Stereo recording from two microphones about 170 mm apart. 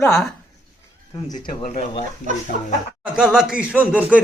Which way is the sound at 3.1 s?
5° right (ahead or behind).